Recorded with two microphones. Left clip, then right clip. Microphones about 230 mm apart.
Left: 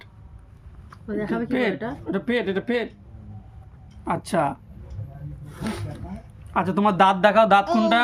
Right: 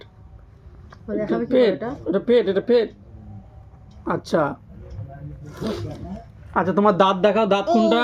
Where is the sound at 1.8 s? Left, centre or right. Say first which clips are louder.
Right 5 dB; left.